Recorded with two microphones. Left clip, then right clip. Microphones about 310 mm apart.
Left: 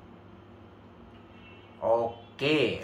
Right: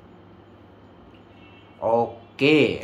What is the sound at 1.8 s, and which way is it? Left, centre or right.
Speech, right.